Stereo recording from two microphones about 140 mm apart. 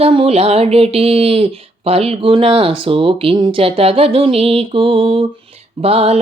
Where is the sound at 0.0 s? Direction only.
45° right (ahead or behind).